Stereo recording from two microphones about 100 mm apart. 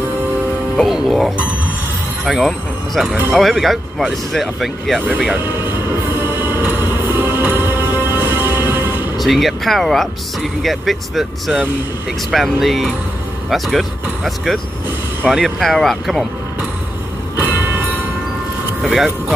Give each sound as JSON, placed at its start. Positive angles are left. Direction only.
{"t": 0.7, "sound": "speech", "side_deg": 0}
{"t": 5.3, "sound": "music", "side_deg": -20}
{"t": 9.2, "sound": "speech", "side_deg": 0}
{"t": 17.4, "sound": "train", "side_deg": -15}
{"t": 18.8, "sound": "speech", "side_deg": 0}